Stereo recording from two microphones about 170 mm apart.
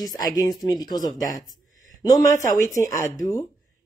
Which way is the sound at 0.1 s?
20° left (ahead or behind).